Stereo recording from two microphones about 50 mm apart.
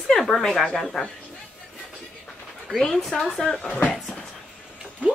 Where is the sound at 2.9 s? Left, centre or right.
Centre.